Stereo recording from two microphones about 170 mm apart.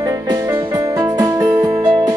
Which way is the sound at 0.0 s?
15° right (ahead or behind).